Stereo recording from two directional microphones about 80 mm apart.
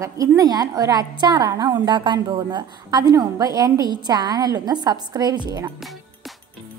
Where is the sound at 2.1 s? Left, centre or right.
Right.